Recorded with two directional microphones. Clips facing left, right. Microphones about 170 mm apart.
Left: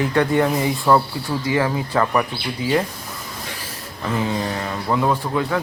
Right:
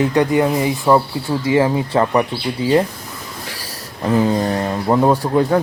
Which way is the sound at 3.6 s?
35° right (ahead or behind).